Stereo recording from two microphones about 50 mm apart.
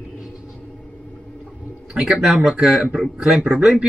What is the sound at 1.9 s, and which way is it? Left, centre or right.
Speech, centre.